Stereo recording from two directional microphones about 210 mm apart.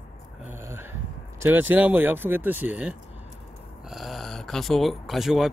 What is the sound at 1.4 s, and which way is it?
Speech, 10° right (ahead or behind).